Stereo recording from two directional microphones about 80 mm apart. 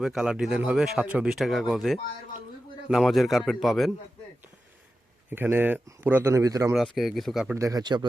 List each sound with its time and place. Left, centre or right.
0.0 s speech: centre
1.3 s a man's voice: centre
5.3 s speech: right
6.3 s speech: right
6.7 s a man's voice: centre
7.5 s speech: right
7.8 s speech: right